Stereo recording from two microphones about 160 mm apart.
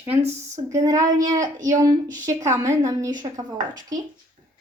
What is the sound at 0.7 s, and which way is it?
A woman's voice, 20° right (ahead or behind).